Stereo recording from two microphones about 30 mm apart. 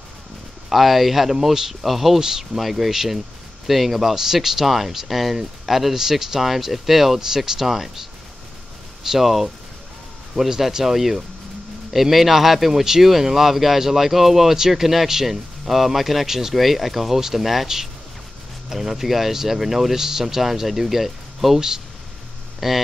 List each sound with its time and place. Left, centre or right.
0.7 s speech: centre
1.3 s speech: centre
2.1 s speech: centre
2.6 s speech: centre
4.1 s speech: centre
7.2 s speech: centre
9.2 s speech: centre
12.8 s speech: centre
18.7 s speech: centre
21.5 s speech: centre